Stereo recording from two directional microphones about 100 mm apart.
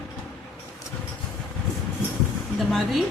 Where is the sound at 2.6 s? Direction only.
Centre (ahead or behind).